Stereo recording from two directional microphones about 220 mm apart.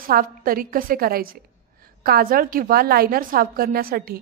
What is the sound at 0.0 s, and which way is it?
A woman's voice, 40° right (ahead or behind).